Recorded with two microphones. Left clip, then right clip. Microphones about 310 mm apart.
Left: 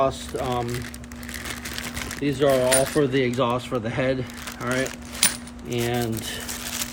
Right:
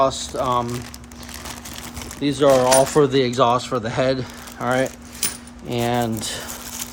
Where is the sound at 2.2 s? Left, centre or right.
Centre.